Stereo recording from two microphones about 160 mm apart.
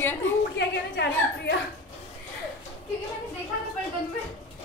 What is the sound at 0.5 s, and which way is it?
A woman's voice, 90° left.